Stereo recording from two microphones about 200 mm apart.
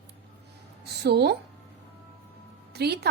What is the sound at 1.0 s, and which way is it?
Speech, 55° right (ahead or behind).